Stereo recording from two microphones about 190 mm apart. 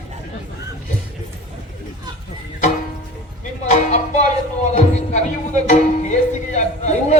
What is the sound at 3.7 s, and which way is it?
Music, 40° left (ahead or behind).